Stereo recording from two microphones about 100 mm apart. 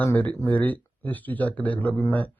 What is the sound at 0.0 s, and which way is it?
Speech, 15° left (ahead or behind).